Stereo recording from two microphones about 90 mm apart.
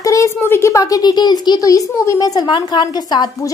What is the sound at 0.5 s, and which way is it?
A woman's voice, 30° left (ahead or behind).